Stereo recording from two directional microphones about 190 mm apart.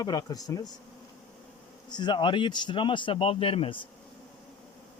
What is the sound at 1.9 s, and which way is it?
Speech, 25° left (ahead or behind).